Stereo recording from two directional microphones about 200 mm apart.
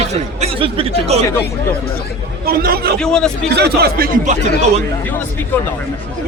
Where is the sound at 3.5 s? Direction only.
55° right (ahead or behind).